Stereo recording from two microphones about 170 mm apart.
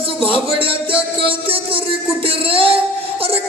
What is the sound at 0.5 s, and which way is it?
Music, 30° right (ahead or behind).